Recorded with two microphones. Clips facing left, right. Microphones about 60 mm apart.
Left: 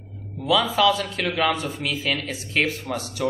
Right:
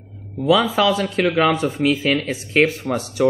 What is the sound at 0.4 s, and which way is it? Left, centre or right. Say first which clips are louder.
Speech: right 4 dB; right.